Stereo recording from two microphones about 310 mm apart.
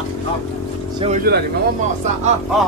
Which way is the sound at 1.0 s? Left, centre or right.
Right.